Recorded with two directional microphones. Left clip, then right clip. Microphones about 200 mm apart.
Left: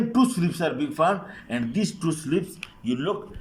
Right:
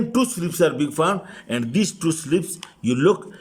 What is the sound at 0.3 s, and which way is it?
A man's voice, 50° right (ahead or behind).